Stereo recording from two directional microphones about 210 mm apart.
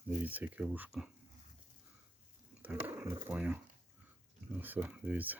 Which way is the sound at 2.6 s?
10° right (ahead or behind).